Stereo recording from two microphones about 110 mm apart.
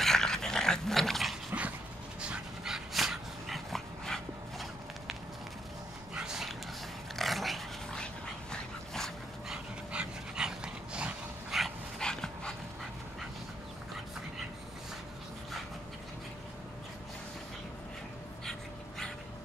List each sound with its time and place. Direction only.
0.0 s dog: 5° left (ahead or behind)
1.5 s dog: 20° right (ahead or behind)
2.2 s dog: 5° right (ahead or behind)
6.1 s dog: 5° right (ahead or behind)
9.9 s dog: 5° right (ahead or behind)
18.4 s dog: 5° left (ahead or behind)